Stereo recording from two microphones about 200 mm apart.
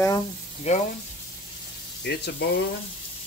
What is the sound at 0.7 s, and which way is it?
Speech, 35° left (ahead or behind).